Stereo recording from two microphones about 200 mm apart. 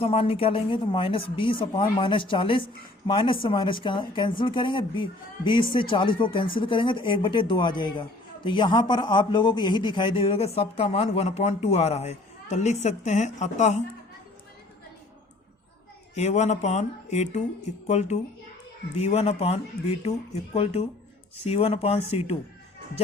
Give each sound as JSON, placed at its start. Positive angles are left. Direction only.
{"t": 0.0, "sound": "a man's voice", "side_deg": 30}
{"t": 16.1, "sound": "speech", "side_deg": 35}